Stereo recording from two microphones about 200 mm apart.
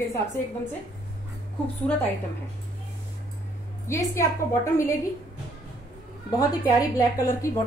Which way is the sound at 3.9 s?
15° left (ahead or behind).